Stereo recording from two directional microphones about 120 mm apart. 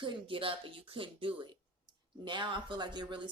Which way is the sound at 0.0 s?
45° right (ahead or behind).